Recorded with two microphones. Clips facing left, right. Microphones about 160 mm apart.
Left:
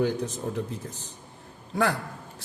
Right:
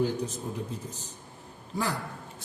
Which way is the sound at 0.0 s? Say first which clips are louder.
Left 2 dB; 70° left (ahead or behind).